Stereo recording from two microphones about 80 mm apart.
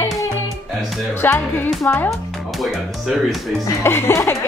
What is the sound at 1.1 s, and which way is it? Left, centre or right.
Speech, left.